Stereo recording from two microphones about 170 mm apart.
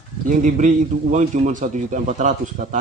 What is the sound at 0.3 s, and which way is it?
A man's voice, 50° right (ahead or behind).